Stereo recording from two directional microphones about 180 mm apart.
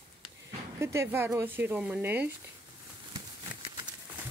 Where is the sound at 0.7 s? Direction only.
15° right (ahead or behind).